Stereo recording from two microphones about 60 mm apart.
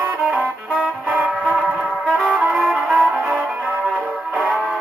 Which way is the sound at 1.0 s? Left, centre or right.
Centre.